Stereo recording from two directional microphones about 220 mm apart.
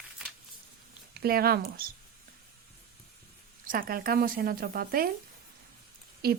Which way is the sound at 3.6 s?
40° right (ahead or behind).